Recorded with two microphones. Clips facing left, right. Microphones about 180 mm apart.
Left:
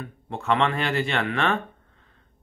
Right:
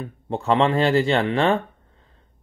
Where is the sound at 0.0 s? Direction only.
30° right (ahead or behind).